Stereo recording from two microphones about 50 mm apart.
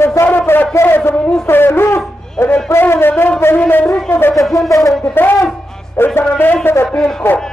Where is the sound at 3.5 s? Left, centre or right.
Left.